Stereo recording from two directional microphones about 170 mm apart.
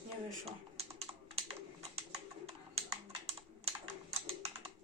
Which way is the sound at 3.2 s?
35° right (ahead or behind).